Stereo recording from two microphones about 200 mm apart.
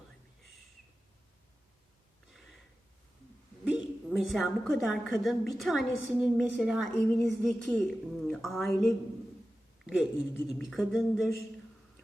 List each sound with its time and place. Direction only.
3.6 s a woman's voice: 5° right (ahead or behind)
9.8 s a sound: 5° right (ahead or behind)
10.3 s a woman's voice: centre (ahead or behind)